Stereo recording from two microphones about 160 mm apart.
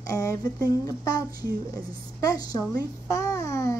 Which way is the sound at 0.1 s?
20° left (ahead or behind).